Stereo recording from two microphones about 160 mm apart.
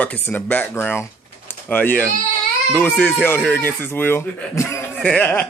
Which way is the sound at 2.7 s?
10° left (ahead or behind).